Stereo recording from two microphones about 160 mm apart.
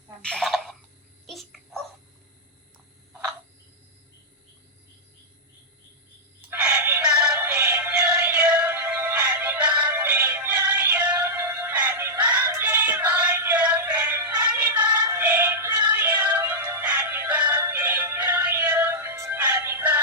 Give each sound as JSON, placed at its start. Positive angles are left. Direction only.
{"t": 0.2, "sound": "cough", "side_deg": 5}
{"t": 1.3, "sound": "babbling", "side_deg": 0}
{"t": 6.5, "sound": "synthetic singing", "side_deg": -10}